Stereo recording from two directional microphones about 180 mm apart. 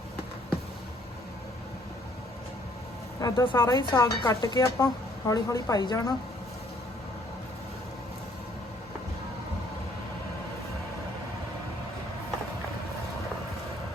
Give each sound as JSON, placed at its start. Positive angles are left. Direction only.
{"t": 3.2, "sound": "speech", "side_deg": 20}